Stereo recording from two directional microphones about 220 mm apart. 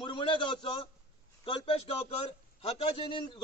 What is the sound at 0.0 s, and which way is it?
A man's voice, 20° left (ahead or behind).